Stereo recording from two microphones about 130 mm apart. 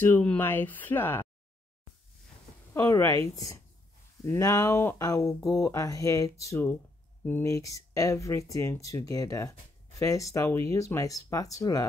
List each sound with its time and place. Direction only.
0.0 s speech: 10° left (ahead or behind)
2.7 s speech: 20° left (ahead or behind)